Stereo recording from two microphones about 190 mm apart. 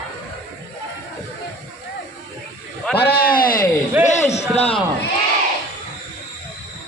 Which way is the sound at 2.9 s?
55° left (ahead or behind).